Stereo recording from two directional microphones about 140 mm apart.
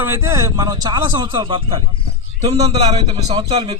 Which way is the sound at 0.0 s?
20° right (ahead or behind).